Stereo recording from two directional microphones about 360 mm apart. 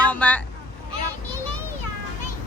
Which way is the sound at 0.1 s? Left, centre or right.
Centre.